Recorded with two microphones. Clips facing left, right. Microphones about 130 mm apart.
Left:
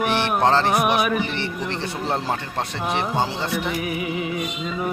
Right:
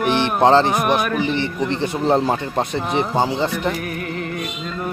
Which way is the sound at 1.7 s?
20° right (ahead or behind).